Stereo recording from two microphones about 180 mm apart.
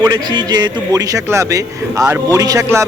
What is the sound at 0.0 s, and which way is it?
A man's voice, 25° right (ahead or behind).